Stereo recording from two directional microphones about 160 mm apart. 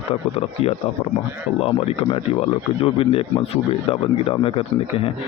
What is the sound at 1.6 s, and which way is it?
Speech, 35° left (ahead or behind).